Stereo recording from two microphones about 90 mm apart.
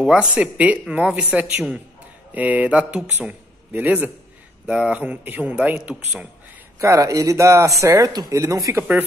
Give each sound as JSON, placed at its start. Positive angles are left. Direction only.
{"t": 0.0, "sound": "a man's voice", "side_deg": -10}
{"t": 6.8, "sound": "a man's voice", "side_deg": -35}